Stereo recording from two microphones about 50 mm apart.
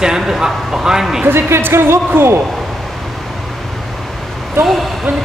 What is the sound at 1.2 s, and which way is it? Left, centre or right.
Speech, right.